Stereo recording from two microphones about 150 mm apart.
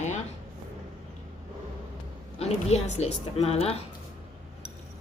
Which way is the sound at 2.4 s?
45° left (ahead or behind).